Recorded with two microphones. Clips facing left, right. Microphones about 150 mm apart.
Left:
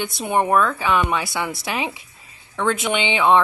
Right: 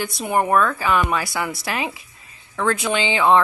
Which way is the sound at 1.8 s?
25° left (ahead or behind).